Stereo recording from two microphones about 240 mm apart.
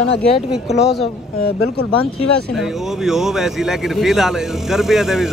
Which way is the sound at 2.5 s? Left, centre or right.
Centre.